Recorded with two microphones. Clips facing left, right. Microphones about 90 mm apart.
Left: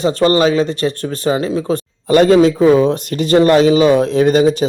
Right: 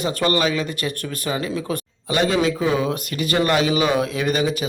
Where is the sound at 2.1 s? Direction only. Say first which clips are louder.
Left 10 dB; 45° left (ahead or behind).